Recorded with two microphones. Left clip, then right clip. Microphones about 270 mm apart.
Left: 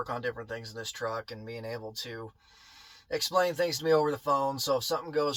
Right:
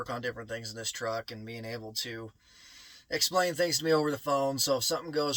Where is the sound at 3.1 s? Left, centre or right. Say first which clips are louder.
Left 1 dB; centre.